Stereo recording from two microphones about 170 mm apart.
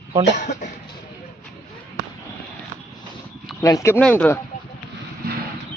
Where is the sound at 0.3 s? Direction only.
45° left (ahead or behind).